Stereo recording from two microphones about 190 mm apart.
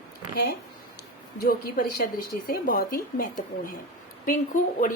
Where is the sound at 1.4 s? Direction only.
50° left (ahead or behind).